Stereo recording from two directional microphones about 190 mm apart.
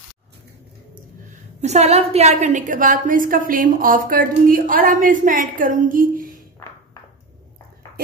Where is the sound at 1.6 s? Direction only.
35° right (ahead or behind).